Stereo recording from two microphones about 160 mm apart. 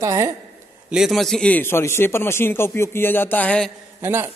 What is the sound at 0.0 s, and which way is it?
Speech, 20° right (ahead or behind).